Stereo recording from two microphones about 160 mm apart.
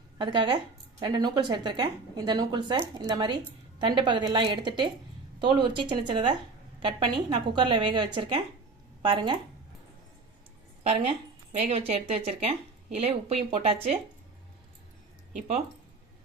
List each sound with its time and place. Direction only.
0.2 s speech: 30° right (ahead or behind)
11.5 s speech: 40° right (ahead or behind)